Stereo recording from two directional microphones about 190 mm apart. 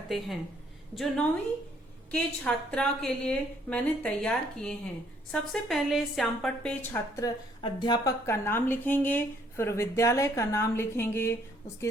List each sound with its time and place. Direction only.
0.9 s a woman's voice: 5° left (ahead or behind)
7.2 s a woman's voice: 25° left (ahead or behind)